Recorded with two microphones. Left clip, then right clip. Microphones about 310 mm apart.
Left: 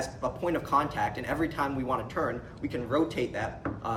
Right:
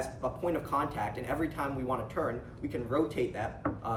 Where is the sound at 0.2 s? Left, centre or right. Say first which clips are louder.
Left 3 dB; left.